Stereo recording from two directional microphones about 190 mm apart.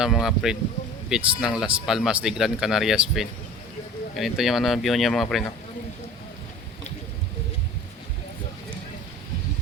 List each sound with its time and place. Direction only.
0.0 s speech: centre (ahead or behind)